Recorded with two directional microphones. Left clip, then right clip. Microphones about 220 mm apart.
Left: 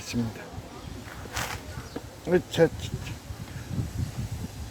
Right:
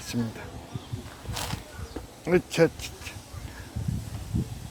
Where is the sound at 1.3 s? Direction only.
Centre (ahead or behind).